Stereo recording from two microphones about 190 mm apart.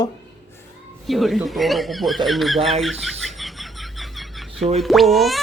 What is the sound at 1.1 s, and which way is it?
Chuckle, centre (ahead or behind).